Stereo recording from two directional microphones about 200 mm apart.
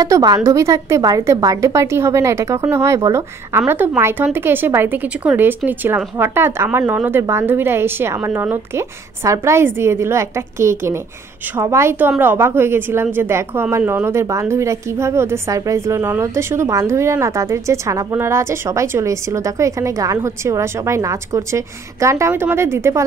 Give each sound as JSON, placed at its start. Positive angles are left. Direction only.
{"t": 0.0, "sound": "a woman's voice", "side_deg": -20}